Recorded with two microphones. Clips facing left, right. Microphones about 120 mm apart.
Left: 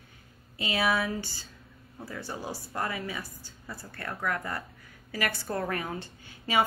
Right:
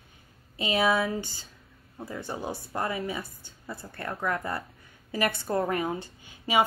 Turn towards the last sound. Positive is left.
turn(degrees=-15)  # may be behind; listen again after turning